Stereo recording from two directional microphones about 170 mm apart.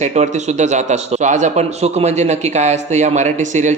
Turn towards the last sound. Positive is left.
turn(degrees=-45)  # may be behind; listen again after turning